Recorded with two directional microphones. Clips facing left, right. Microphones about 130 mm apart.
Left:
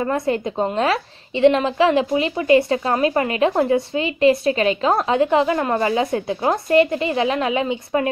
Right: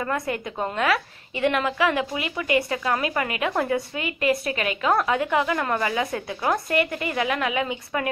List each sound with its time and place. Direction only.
0.0 s a woman's voice: 30° left (ahead or behind)